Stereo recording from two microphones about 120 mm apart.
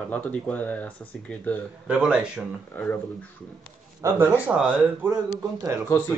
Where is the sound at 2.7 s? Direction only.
15° left (ahead or behind).